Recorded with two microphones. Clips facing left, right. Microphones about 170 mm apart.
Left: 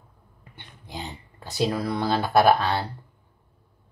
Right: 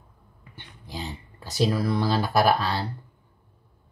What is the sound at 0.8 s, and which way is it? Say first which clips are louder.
Speech: right 1 dB; 20° left (ahead or behind).